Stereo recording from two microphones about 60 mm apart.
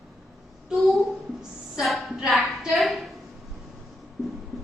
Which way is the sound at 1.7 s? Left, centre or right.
Centre.